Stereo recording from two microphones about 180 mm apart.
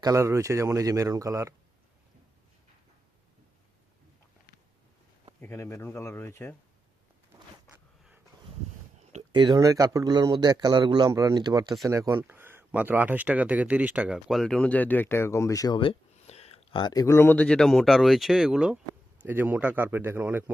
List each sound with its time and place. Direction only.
0.0 s speech: 15° right (ahead or behind)
5.4 s speech: 15° left (ahead or behind)
9.3 s speech: 25° right (ahead or behind)